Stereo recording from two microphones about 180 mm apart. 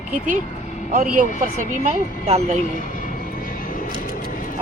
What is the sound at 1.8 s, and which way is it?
Speech, 40° right (ahead or behind).